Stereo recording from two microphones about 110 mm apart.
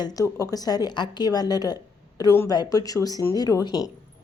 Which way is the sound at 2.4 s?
35° left (ahead or behind).